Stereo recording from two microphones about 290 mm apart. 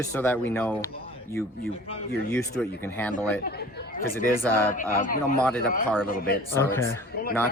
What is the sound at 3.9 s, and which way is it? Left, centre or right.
Speech, left.